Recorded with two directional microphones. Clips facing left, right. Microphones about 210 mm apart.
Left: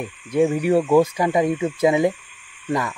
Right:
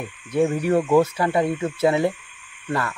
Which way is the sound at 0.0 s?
10° left (ahead or behind).